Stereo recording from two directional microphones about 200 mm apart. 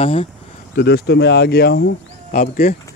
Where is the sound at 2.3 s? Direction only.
40° left (ahead or behind).